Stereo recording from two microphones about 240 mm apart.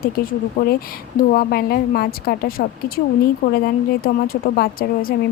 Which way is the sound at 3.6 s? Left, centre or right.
Left.